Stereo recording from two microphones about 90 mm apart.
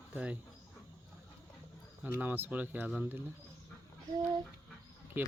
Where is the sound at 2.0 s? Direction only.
20° right (ahead or behind).